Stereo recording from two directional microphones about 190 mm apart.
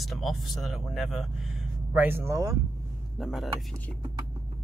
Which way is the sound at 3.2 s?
Centre (ahead or behind).